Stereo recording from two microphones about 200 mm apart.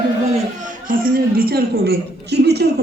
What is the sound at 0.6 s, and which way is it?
A man's voice, 45° right (ahead or behind).